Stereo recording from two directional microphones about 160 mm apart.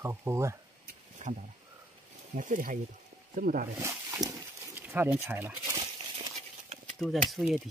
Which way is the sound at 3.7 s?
20° right (ahead or behind).